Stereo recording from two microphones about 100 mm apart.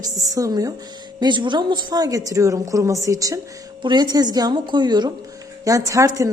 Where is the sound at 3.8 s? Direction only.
45° right (ahead or behind).